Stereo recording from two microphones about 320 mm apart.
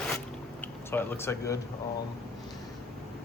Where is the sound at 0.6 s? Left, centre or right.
Centre.